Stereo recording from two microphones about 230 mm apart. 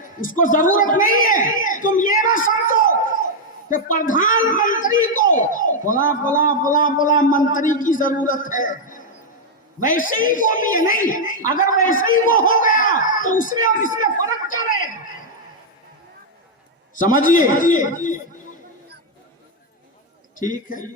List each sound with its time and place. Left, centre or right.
0.2 s speech: left
16.9 s speech: left
20.4 s speech: left